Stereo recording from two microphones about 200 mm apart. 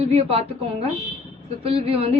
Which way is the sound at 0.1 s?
30° right (ahead or behind).